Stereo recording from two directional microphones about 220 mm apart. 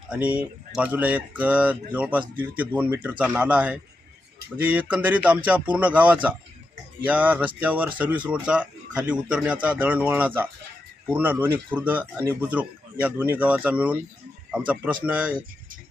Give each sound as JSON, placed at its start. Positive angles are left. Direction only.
{"t": 0.1, "sound": "speech", "side_deg": -5}
{"t": 15.0, "sound": "speech", "side_deg": -5}